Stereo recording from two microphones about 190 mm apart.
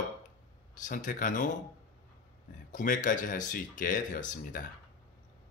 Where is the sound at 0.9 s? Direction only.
45° left (ahead or behind).